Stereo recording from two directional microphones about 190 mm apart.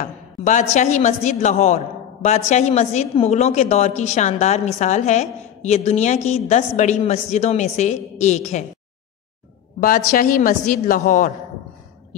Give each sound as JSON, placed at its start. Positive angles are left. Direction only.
{"t": 0.0, "sound": "a woman's voice", "side_deg": 40}
{"t": 9.8, "sound": "a woman's voice", "side_deg": 45}